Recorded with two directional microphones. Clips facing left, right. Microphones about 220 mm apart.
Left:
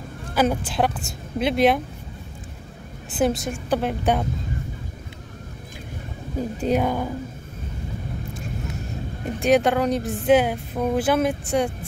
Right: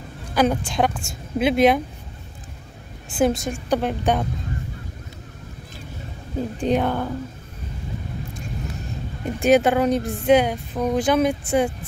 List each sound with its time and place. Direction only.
0.3 s a woman's voice: 5° left (ahead or behind)
3.2 s a woman's voice: centre (ahead or behind)
6.6 s speech: 10° left (ahead or behind)
9.4 s a woman's voice: 5° right (ahead or behind)